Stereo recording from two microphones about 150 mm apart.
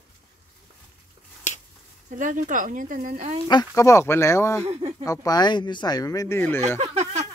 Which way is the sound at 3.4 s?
25° left (ahead or behind).